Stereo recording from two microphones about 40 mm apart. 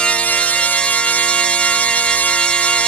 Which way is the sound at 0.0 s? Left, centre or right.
Left.